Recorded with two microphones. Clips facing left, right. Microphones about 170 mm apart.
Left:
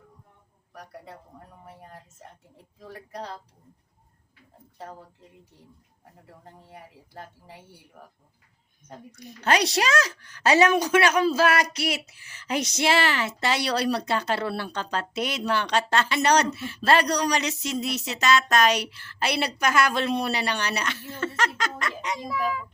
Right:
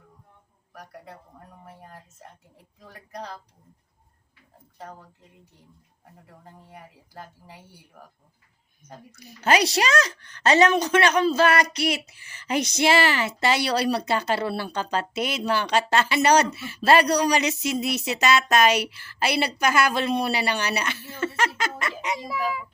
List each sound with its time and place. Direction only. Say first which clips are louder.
2.8 s speech: left 1 dB; 30° left (ahead or behind)
8.9 s speech: left 2 dB; 5° right (ahead or behind)